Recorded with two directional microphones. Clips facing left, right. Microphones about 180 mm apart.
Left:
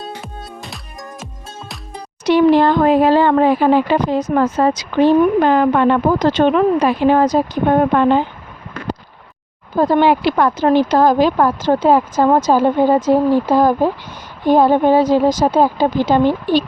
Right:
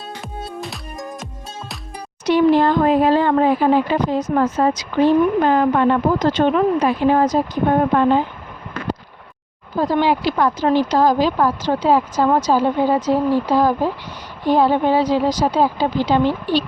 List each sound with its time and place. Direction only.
2.2 s speech: 75° left (ahead or behind)
9.7 s speech: 55° left (ahead or behind)